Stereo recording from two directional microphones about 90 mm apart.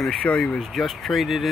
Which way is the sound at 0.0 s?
10° left (ahead or behind).